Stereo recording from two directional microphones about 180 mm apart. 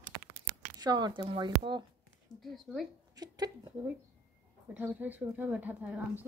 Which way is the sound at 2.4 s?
Centre (ahead or behind).